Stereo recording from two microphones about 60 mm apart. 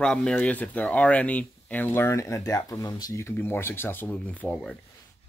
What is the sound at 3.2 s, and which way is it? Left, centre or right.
Speech, left.